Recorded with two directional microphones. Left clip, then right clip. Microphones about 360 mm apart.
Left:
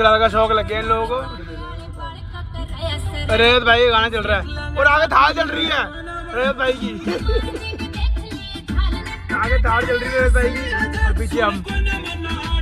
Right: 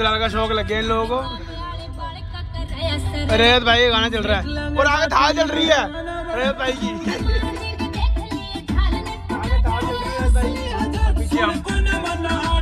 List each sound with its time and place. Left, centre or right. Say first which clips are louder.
0.0 s speech: left 6 dB; centre
3.3 s speech: left 1 dB; centre
7.2 s music: left 3 dB; right
8.9 s music: left 3 dB; centre
12.2 s music: right 5 dB; right